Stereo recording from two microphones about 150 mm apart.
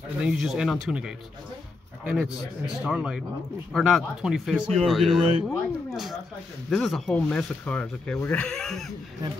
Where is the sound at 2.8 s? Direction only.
5° right (ahead or behind).